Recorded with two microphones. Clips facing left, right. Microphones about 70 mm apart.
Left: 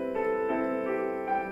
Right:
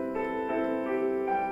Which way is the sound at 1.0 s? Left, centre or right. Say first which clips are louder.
Right 3 dB; left.